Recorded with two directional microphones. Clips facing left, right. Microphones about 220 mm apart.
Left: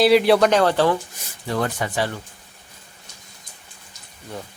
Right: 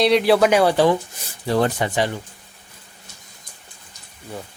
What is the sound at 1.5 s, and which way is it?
Speech, 30° right (ahead or behind).